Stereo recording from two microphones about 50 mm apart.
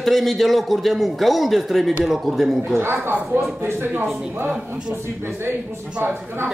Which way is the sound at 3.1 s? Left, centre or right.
Right.